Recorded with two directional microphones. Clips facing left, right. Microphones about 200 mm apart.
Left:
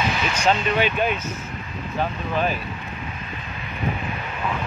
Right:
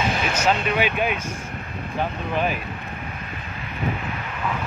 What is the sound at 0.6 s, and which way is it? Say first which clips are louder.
Speech: left 1 dB; 10° right (ahead or behind).